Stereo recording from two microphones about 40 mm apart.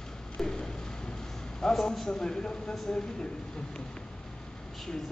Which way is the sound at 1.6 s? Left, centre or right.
Centre.